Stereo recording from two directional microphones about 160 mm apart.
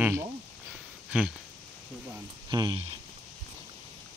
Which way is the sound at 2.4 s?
30° right (ahead or behind).